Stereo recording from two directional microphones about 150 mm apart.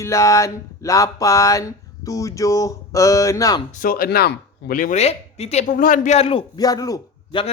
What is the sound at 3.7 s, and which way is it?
Speech, 70° left (ahead or behind).